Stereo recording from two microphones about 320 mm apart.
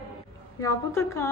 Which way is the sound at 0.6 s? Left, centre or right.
Centre.